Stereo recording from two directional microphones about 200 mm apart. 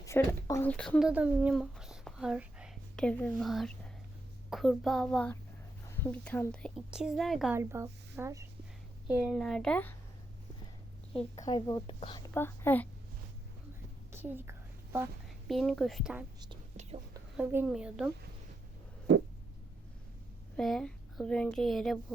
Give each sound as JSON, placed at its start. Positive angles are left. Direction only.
{"t": 0.0, "sound": "speech", "side_deg": 15}
{"t": 7.5, "sound": "a woman's voice", "side_deg": -15}
{"t": 11.3, "sound": "a woman's voice", "side_deg": 20}
{"t": 12.3, "sound": "a woman's voice", "side_deg": 10}
{"t": 14.1, "sound": "a woman's voice", "side_deg": -10}
{"t": 15.4, "sound": "speech", "side_deg": 0}
{"t": 17.3, "sound": "speech", "side_deg": -5}
{"t": 19.1, "sound": "a sound", "side_deg": -60}
{"t": 20.6, "sound": "speech", "side_deg": 0}